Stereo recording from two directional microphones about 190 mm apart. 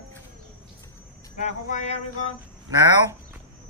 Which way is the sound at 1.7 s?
40° left (ahead or behind).